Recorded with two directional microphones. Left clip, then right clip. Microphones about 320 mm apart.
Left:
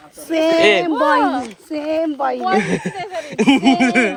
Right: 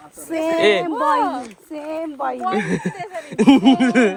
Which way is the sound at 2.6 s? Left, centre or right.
Centre.